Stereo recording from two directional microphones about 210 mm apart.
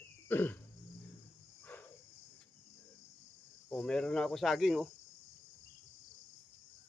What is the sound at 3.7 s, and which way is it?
Speech, 5° left (ahead or behind).